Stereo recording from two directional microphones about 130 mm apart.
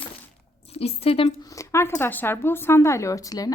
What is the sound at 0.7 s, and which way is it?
Speech, 50° left (ahead or behind).